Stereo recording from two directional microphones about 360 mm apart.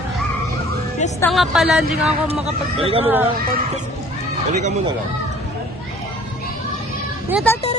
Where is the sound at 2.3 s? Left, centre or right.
Centre.